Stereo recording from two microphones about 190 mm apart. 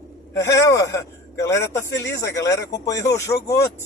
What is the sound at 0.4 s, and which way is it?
Speech, 15° left (ahead or behind).